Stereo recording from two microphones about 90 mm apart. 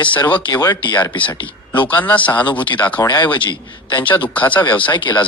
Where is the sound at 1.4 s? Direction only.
70° left (ahead or behind).